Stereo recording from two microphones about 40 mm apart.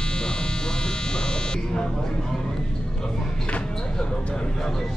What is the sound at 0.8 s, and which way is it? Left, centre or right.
Electric shaver, left.